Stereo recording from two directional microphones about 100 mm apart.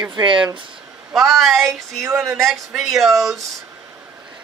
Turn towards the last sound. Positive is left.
turn(degrees=0)  # may be behind; listen again after turning